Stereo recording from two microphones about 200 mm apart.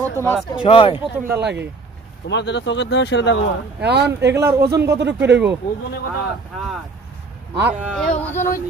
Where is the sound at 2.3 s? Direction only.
60° left (ahead or behind).